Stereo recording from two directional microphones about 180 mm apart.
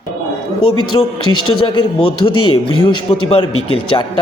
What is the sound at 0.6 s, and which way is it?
A man's voice, 25° left (ahead or behind).